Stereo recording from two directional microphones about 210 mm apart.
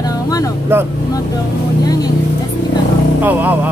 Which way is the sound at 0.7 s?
10° right (ahead or behind).